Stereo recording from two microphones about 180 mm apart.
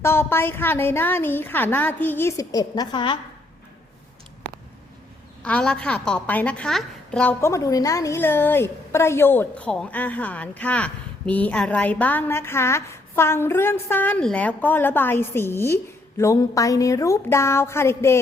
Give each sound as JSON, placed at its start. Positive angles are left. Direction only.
{"t": 0.0, "sound": "a woman's voice", "side_deg": 15}
{"t": 5.4, "sound": "a woman's voice", "side_deg": 5}